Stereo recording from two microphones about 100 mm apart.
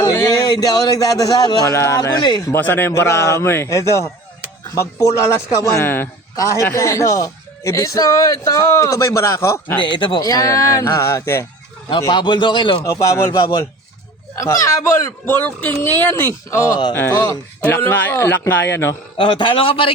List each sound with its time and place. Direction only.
0.0 s speech: 35° left (ahead or behind)
1.7 s speech: 30° left (ahead or behind)
2.0 s a man's voice: 45° left (ahead or behind)
2.5 s speech: 20° left (ahead or behind)
5.7 s speech: 20° left (ahead or behind)
6.3 s speech: 30° left (ahead or behind)
9.8 s a man's voice: 50° left (ahead or behind)
10.2 s speech: 35° left (ahead or behind)
11.9 s a man's voice: 50° left (ahead or behind)
12.8 s speech: 30° left (ahead or behind)
17.6 s speech: 20° left (ahead or behind)
19.1 s a man's voice: 55° left (ahead or behind)